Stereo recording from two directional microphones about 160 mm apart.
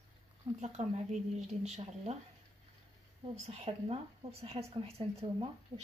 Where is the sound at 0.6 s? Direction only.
45° right (ahead or behind).